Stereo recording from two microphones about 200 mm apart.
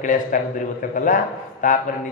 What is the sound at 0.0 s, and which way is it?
Speech, 40° left (ahead or behind).